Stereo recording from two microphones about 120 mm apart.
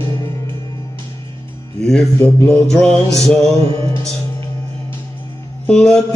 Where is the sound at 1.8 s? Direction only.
5° left (ahead or behind).